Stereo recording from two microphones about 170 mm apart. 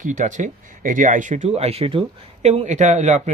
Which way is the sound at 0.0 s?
45° right (ahead or behind).